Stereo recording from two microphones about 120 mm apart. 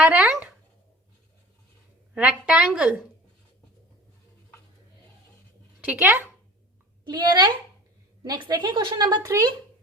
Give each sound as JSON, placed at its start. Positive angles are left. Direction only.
{"t": 0.1, "sound": "a woman's voice", "side_deg": -10}
{"t": 2.1, "sound": "a woman's voice", "side_deg": -10}
{"t": 5.8, "sound": "a woman's voice", "side_deg": -15}
{"t": 7.0, "sound": "a woman's voice", "side_deg": -35}